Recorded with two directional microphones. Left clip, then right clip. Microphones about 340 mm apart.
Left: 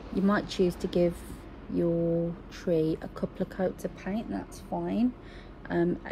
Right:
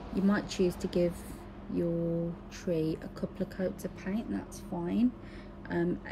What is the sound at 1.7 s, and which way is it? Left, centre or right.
Mantra, left.